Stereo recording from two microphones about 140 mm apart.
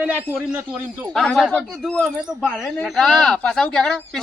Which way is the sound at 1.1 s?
Centre (ahead or behind).